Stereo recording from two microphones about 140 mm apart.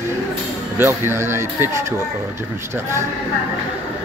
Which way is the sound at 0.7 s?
15° right (ahead or behind).